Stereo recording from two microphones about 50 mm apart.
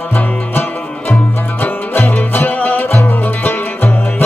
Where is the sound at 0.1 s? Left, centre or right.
Left.